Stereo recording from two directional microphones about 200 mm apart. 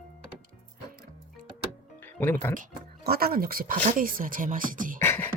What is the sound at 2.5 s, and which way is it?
Speech, 45° right (ahead or behind).